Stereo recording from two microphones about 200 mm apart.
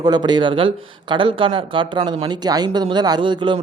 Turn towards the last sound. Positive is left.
turn(degrees=-25)  # may be behind; listen again after turning